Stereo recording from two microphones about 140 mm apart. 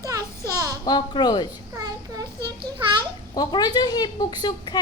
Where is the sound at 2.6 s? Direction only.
35° right (ahead or behind).